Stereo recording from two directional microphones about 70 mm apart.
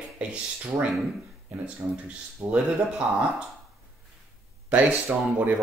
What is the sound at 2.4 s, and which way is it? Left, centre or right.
Speech, right.